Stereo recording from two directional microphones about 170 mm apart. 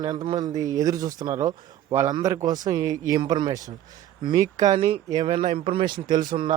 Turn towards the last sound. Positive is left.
turn(degrees=-55)  # may be behind; listen again after turning